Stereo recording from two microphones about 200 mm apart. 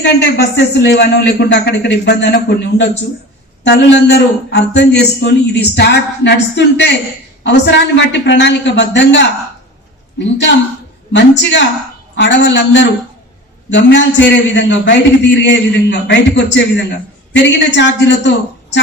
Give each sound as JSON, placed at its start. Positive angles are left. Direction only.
{"t": 0.0, "sound": "a man's voice", "side_deg": 55}
{"t": 11.1, "sound": "a man's voice", "side_deg": 60}